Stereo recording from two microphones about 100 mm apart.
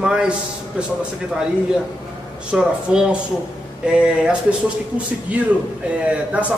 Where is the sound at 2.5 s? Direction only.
10° right (ahead or behind).